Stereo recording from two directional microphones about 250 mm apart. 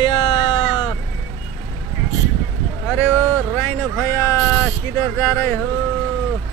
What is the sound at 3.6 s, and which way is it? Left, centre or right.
Speech, centre.